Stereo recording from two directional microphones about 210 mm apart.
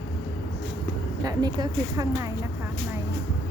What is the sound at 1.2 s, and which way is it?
Speech, 20° right (ahead or behind).